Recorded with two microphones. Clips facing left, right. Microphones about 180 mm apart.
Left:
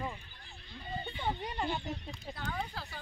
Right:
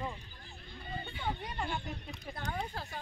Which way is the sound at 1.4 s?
20° left (ahead or behind).